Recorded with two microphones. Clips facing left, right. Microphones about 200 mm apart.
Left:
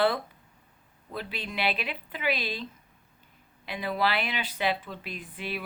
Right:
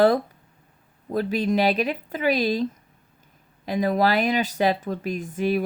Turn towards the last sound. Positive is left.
turn(degrees=-45)  # may be behind; listen again after turning